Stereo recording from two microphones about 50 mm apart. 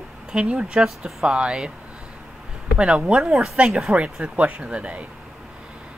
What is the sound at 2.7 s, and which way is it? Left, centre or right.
Speech, centre.